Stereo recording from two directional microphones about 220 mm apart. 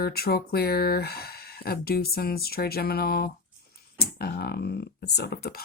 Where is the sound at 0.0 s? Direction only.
45° left (ahead or behind).